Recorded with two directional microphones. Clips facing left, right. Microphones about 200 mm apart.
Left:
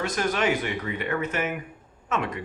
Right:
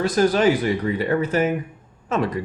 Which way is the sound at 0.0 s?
35° right (ahead or behind).